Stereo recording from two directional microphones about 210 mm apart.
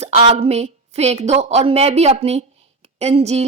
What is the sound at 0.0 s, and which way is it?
A woman's voice, 30° right (ahead or behind).